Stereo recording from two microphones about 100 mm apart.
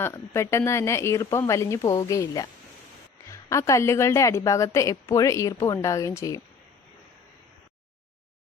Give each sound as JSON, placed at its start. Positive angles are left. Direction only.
{"t": 0.0, "sound": "a woman's voice", "side_deg": 30}